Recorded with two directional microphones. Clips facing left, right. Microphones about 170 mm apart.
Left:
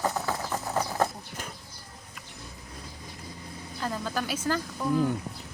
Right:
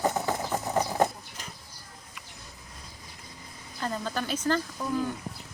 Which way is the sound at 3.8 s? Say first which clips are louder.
Even; 5° left (ahead or behind).